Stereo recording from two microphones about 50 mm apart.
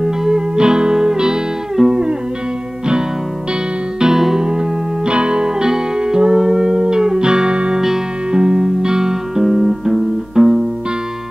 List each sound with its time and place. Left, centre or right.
0.0 s music: centre
4.0 s music: centre